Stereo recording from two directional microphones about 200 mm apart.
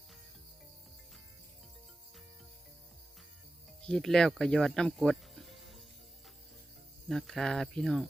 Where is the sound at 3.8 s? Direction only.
5° left (ahead or behind).